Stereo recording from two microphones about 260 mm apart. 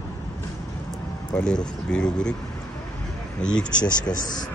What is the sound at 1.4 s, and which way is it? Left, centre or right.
Speech, centre.